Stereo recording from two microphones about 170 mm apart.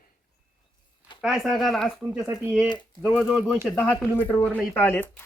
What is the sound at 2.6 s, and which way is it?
Speech, 25° left (ahead or behind).